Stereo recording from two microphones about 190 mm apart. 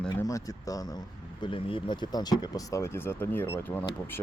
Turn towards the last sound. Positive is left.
turn(degrees=10)  # may be behind; listen again after turning